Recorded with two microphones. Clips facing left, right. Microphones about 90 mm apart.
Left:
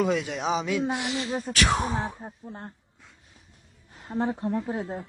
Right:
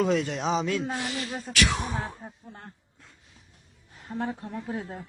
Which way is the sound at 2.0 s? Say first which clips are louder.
Left 3 dB; 20° left (ahead or behind).